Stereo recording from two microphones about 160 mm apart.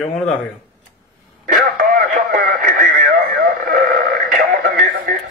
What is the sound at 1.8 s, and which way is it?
Radio, 70° right (ahead or behind).